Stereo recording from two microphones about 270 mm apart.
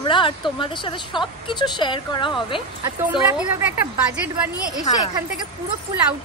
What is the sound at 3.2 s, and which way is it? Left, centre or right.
Speech, centre.